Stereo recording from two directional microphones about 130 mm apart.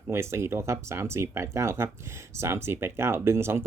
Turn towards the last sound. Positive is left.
turn(degrees=-20)  # may be behind; listen again after turning